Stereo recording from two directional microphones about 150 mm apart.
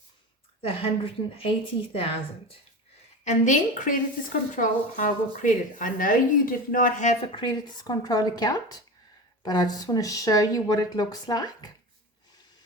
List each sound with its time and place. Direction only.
0.6 s a woman's voice: 40° left (ahead or behind)
3.2 s speech: 55° left (ahead or behind)
7.3 s speech: 25° left (ahead or behind)